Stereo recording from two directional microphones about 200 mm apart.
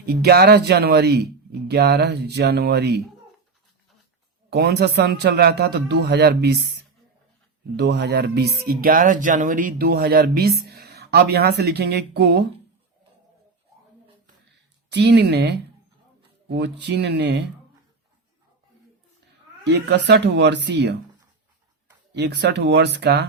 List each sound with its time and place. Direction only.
0.0 s a man's voice: 50° right (ahead or behind)
4.4 s a man's voice: 55° right (ahead or behind)
7.8 s speech: 55° right (ahead or behind)
14.8 s a man's voice: 60° right (ahead or behind)
19.6 s a man's voice: 60° right (ahead or behind)
22.1 s a man's voice: 55° right (ahead or behind)